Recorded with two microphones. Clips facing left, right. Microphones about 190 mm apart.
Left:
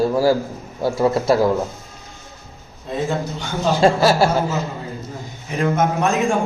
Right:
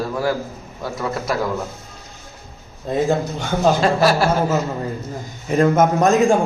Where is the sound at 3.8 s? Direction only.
25° left (ahead or behind).